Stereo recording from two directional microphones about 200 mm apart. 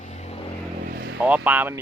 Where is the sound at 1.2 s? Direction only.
5° right (ahead or behind).